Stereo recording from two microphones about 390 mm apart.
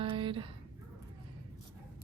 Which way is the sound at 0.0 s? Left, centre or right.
Centre.